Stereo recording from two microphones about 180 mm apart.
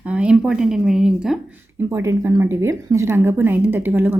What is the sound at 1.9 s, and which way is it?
Speech, 15° right (ahead or behind).